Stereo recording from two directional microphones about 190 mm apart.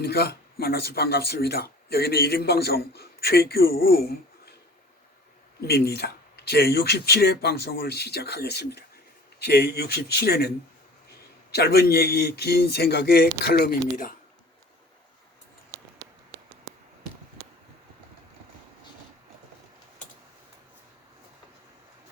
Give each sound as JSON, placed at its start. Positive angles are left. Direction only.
{"t": 0.0, "sound": "speech", "side_deg": 60}
{"t": 5.6, "sound": "speech", "side_deg": 60}
{"t": 11.5, "sound": "speech", "side_deg": 55}